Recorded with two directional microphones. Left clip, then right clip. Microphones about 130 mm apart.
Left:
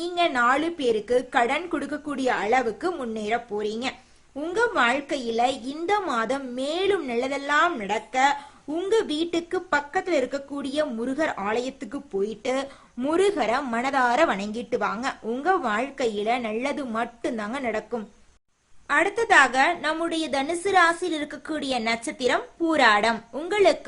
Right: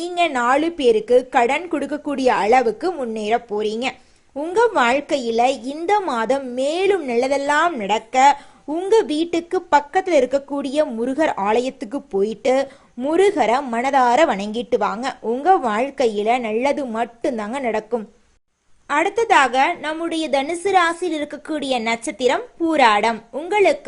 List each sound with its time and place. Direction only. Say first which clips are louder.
0.0 s a woman's voice: right 3 dB; 25° right (ahead or behind)
13.1 s a woman's voice: right 6 dB; 20° right (ahead or behind)
23.1 s a woman's voice: right 4 dB; centre (ahead or behind)
23.5 s speech: right 4 dB; 15° right (ahead or behind)